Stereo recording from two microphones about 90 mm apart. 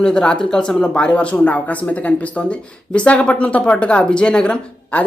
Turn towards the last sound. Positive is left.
turn(degrees=10)  # may be behind; listen again after turning